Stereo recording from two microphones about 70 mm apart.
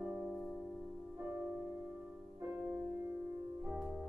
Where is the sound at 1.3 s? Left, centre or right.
Right.